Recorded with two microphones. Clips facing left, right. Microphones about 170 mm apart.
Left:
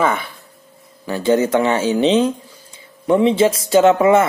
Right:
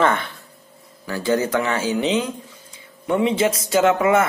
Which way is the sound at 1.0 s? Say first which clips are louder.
Left 5 dB; 20° left (ahead or behind).